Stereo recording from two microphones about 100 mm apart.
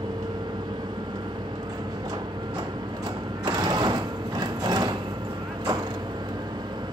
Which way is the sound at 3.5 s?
45° right (ahead or behind).